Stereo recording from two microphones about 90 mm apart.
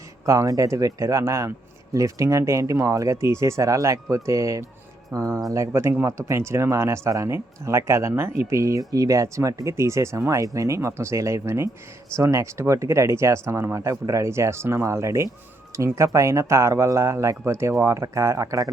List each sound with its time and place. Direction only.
0.3 s speech: 40° right (ahead or behind)